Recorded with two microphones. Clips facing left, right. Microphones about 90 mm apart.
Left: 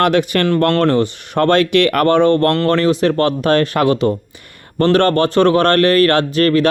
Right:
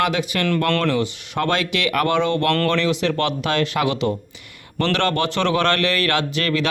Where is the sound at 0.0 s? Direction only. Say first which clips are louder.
Left 7 dB; 55° left (ahead or behind).